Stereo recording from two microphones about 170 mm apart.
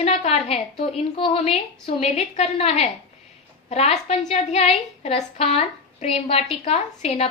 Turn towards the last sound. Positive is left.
turn(degrees=40)  # may be behind; listen again after turning